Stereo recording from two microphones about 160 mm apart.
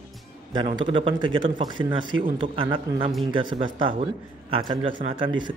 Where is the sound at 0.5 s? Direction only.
30° right (ahead or behind).